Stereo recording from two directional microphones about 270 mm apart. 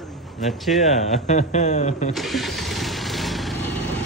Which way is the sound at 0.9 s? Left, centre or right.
Left.